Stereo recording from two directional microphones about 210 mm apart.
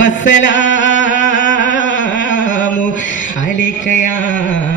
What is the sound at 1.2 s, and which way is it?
Music, 35° left (ahead or behind).